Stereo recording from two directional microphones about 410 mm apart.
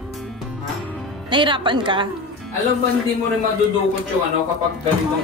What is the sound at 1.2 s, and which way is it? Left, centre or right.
Speech, centre.